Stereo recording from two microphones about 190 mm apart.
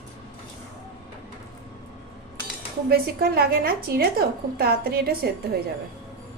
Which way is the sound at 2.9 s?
50° right (ahead or behind).